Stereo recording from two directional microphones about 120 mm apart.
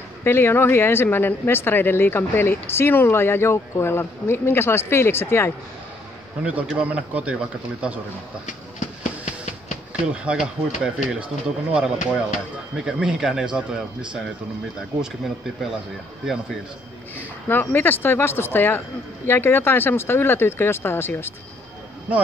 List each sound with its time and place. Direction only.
0.2 s speech: 20° left (ahead or behind)
6.9 s speech: 10° right (ahead or behind)
8.5 s a sound: 90° left
10.0 s speech: 10° right (ahead or behind)
17.5 s speech: 15° left (ahead or behind)